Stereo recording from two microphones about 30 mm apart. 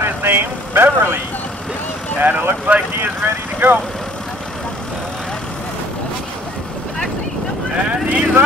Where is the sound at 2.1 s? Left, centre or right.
Right.